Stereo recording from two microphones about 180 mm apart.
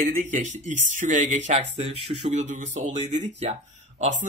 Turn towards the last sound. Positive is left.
turn(degrees=-40)  # may be behind; listen again after turning